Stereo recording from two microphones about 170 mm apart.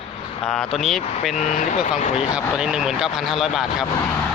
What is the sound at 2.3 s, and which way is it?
Speech, 5° right (ahead or behind).